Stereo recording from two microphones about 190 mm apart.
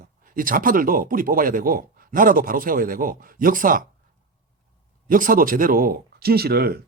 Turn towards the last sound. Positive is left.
turn(degrees=-55)  # may be behind; listen again after turning